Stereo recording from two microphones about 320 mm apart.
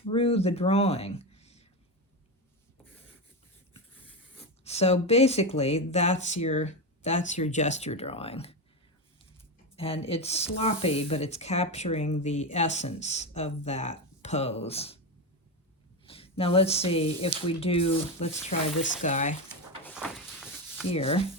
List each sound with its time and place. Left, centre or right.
0.1 s speech: centre
4.6 s speech: centre
9.7 s speech: centre
16.0 s speech: centre
19.8 s a sound: centre
20.9 s speech: centre